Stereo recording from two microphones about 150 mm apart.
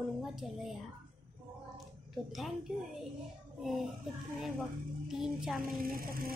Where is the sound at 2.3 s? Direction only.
Centre (ahead or behind).